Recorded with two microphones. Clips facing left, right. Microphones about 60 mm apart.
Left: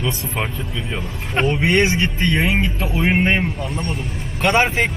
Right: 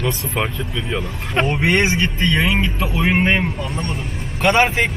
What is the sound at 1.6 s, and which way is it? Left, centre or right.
Speech, right.